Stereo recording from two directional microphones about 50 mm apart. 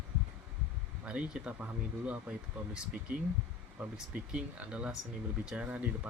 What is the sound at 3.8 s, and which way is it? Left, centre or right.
Speech, right.